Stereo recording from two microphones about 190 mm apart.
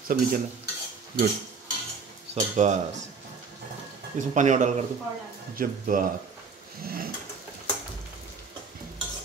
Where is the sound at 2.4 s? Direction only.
40° right (ahead or behind).